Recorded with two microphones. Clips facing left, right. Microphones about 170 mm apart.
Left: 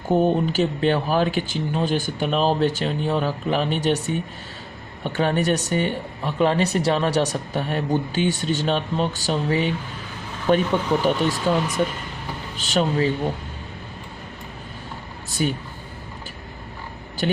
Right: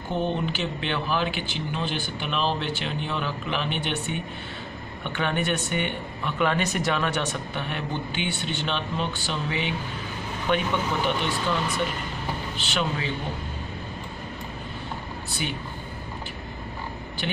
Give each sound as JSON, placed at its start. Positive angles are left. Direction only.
{"t": 0.1, "sound": "speech", "side_deg": 45}
{"t": 12.5, "sound": "speech", "side_deg": 40}
{"t": 15.4, "sound": "speech", "side_deg": 40}
{"t": 17.2, "sound": "speech", "side_deg": 40}